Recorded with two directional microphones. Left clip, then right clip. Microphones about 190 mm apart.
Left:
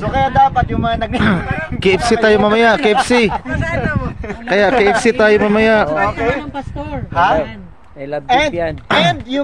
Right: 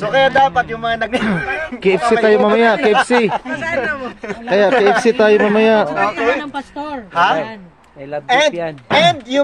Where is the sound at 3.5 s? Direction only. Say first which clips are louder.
Even; 30° right (ahead or behind).